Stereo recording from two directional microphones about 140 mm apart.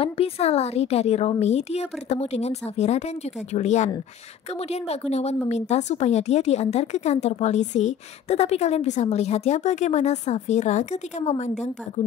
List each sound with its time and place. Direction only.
0.0 s a woman's voice: 45° left (ahead or behind)